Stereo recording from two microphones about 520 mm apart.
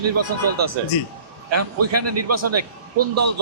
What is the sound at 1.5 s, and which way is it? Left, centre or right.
Speech, right.